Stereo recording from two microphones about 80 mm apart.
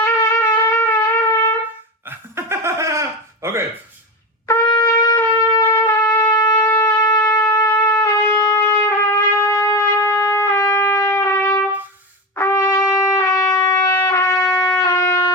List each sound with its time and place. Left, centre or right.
0.0 s wind instrument: left
2.0 s laughter: right
4.5 s trumpet: left
5.1 s shofar: left
6.3 s shofar: left
6.6 s wind instrument: left
11.0 s trumpet: left